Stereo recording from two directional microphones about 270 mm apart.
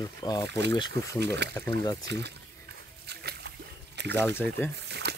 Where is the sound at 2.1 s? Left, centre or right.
Right.